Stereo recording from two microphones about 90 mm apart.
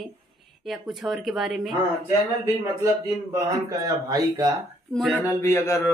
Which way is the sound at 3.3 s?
40° right (ahead or behind).